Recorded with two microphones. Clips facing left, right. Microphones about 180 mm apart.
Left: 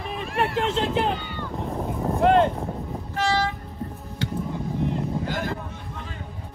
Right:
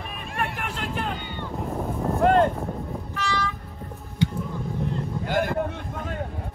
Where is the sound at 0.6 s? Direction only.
25° left (ahead or behind).